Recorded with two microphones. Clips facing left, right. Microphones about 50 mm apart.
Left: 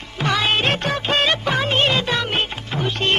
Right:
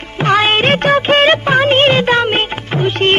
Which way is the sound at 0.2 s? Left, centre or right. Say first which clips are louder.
Right 7 dB; right.